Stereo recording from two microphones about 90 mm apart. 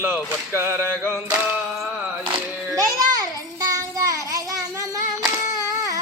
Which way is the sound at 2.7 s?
40° right (ahead or behind).